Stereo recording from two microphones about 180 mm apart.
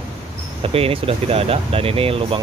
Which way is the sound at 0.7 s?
30° right (ahead or behind).